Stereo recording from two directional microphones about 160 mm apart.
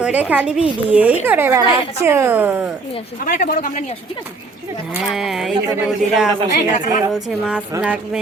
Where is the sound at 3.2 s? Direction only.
55° left (ahead or behind).